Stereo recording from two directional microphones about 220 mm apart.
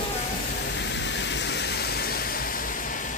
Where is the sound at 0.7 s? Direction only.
55° left (ahead or behind).